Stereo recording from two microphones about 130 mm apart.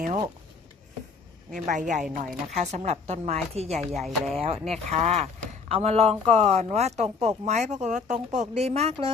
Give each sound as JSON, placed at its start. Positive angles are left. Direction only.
{"t": 1.5, "sound": "a woman's voice", "side_deg": -80}
{"t": 2.1, "sound": "speech", "side_deg": -60}
{"t": 3.8, "sound": "speech", "side_deg": 0}
{"t": 4.7, "sound": "speech", "side_deg": -60}